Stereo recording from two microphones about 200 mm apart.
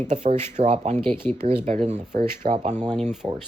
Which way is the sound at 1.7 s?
35° right (ahead or behind).